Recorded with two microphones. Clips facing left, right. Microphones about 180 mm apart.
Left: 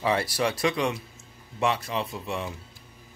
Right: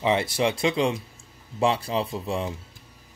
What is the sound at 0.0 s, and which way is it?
Speech, 20° right (ahead or behind).